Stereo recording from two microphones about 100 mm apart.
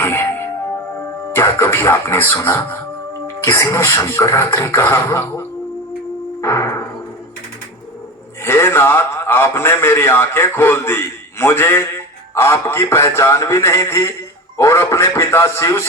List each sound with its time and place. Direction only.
0.0 s music: 25° left (ahead or behind)
1.3 s a man's voice: 25° left (ahead or behind)
6.4 s music: 30° left (ahead or behind)
8.4 s a man's voice: 25° left (ahead or behind)